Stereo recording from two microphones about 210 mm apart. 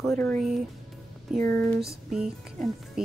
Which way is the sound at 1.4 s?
10° left (ahead or behind).